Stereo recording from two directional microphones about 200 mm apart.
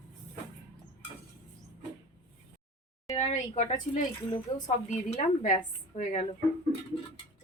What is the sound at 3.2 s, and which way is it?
A woman's voice, 35° left (ahead or behind).